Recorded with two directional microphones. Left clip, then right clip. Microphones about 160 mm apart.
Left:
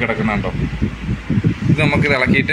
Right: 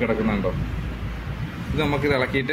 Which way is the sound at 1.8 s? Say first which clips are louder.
Left 5 dB; 10° right (ahead or behind).